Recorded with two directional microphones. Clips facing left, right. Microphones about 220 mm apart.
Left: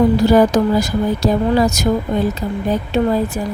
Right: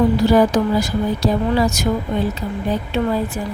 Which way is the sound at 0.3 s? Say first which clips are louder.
Left 2 dB; 45° left (ahead or behind).